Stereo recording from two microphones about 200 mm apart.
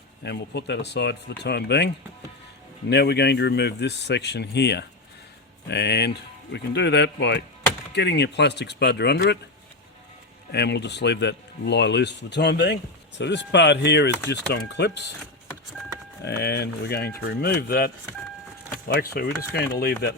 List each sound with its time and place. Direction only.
0.2 s speech: 60° left (ahead or behind)
2.9 s speech: 55° left (ahead or behind)
10.5 s speech: 60° left (ahead or behind)
16.2 s speech: 60° left (ahead or behind)
18.9 s speech: 50° left (ahead or behind)